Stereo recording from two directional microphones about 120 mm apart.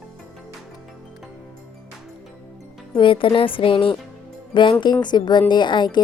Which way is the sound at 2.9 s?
45° left (ahead or behind).